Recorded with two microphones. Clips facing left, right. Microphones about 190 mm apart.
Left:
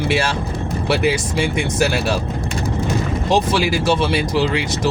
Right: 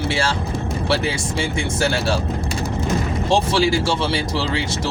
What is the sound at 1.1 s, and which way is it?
Speech, 20° left (ahead or behind).